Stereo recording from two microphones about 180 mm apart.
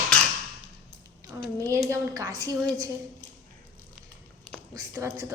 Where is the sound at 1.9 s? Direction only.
15° right (ahead or behind).